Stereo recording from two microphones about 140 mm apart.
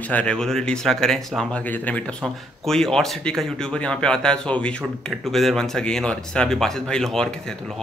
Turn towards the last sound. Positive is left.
turn(degrees=5)  # may be behind; listen again after turning